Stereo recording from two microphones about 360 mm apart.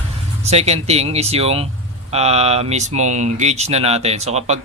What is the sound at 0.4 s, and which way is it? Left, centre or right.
Speech, centre.